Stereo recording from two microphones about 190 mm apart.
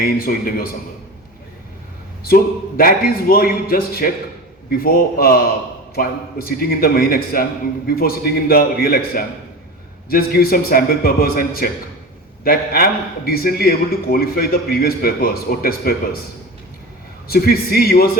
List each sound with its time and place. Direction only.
0.0 s a man's voice: 50° left (ahead or behind)
2.2 s a man's voice: 50° left (ahead or behind)
17.2 s a man's voice: 55° left (ahead or behind)